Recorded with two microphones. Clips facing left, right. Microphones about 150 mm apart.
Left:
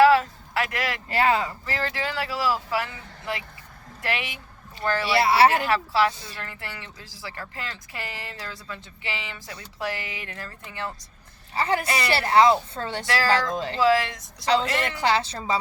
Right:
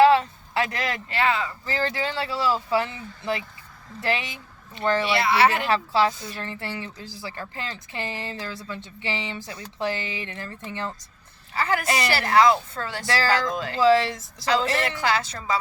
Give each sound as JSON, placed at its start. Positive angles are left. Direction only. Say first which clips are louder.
{"t": 0.0, "sound": "a sound", "louder": "even", "side_deg": -25}
{"t": 1.1, "sound": "a woman's voice", "louder": "left 3 dB", "side_deg": 40}
{"t": 1.6, "sound": "speech", "louder": "right 2 dB", "side_deg": -30}
{"t": 5.1, "sound": "a woman's voice", "louder": "left 5 dB", "side_deg": 35}
{"t": 5.6, "sound": "speech", "louder": "right 1 dB", "side_deg": -25}
{"t": 11.5, "sound": "a woman's voice", "louder": "even", "side_deg": 30}
{"t": 13.7, "sound": "a woman's voice", "louder": "right 3 dB", "side_deg": -30}
{"t": 14.9, "sound": "a woman's voice", "louder": "left 1 dB", "side_deg": 30}